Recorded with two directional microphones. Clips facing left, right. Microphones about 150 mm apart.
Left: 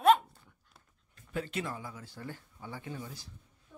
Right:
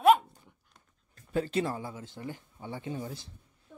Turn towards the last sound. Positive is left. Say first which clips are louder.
# right 5 dB
turn(degrees=-30)  # may be behind; listen again after turning